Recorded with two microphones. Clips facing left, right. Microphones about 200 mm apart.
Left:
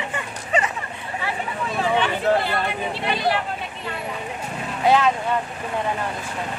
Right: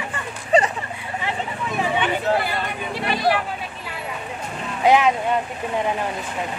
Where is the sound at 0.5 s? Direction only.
35° right (ahead or behind).